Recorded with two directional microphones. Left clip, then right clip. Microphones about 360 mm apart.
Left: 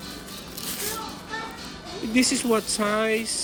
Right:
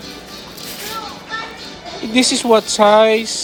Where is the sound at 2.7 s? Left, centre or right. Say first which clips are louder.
Right 15 dB; centre.